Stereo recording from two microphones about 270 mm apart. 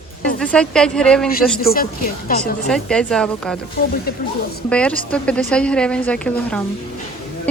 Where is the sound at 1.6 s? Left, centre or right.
Left.